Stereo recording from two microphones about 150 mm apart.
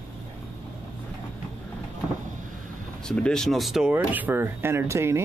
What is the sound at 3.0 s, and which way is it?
Speech, 5° left (ahead or behind).